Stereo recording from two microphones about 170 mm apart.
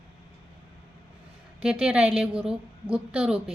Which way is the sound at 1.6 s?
5° right (ahead or behind).